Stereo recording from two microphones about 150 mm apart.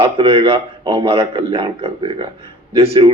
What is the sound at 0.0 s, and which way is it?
Speech, 40° right (ahead or behind).